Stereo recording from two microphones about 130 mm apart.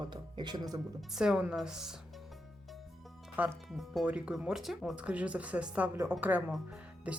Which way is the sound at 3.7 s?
Centre (ahead or behind).